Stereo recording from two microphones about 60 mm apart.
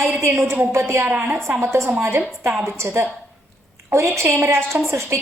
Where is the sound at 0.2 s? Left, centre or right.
Right.